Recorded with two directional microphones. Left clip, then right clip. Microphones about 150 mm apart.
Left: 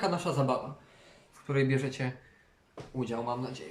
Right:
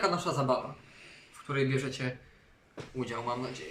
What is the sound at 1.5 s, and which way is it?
Speech, 10° left (ahead or behind).